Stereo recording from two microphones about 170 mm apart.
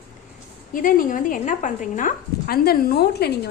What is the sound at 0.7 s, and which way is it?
Speech, 55° left (ahead or behind).